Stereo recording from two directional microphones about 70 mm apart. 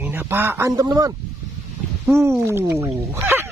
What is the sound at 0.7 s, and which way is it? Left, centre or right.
Speech, right.